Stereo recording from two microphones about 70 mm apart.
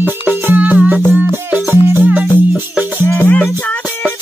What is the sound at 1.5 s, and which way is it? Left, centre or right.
Music, right.